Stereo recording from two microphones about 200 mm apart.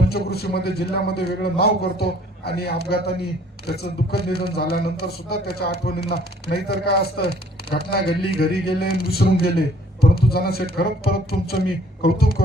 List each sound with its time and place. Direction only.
0.1 s a man's voice: 50° left (ahead or behind)